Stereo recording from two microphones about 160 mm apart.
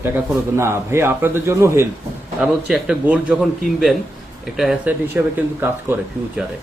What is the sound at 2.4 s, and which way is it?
Speech, 5° right (ahead or behind).